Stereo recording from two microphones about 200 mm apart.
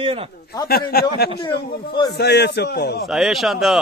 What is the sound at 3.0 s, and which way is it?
Speech, centre (ahead or behind).